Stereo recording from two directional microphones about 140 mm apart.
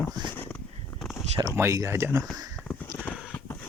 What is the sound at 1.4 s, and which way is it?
Speech, 20° right (ahead or behind).